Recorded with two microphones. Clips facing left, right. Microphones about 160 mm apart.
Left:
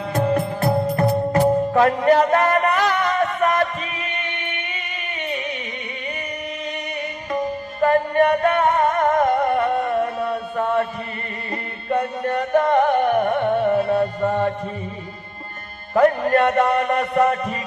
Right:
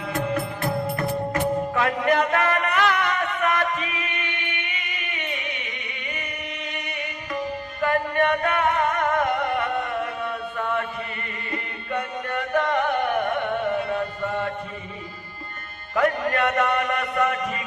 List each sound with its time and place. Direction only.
0.1 s music: 35° left (ahead or behind)
7.3 s music: 35° left (ahead or behind)
16.0 s music: 35° left (ahead or behind)